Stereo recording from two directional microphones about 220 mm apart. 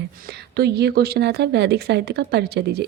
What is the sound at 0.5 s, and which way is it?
Speech, 45° right (ahead or behind).